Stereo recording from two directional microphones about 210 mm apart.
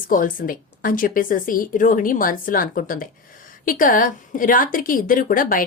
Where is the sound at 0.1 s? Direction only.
40° left (ahead or behind).